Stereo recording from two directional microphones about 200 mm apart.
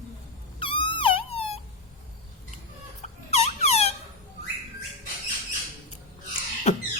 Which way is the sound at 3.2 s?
30° left (ahead or behind).